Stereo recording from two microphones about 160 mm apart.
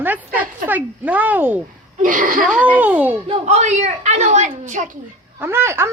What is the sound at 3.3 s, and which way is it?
A woman's voice, 45° right (ahead or behind).